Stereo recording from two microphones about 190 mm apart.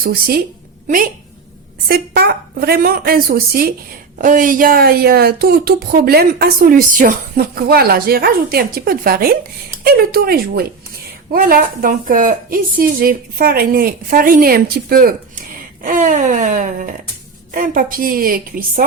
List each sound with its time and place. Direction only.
0.0 s speech: 50° right (ahead or behind)
1.9 s speech: 55° right (ahead or behind)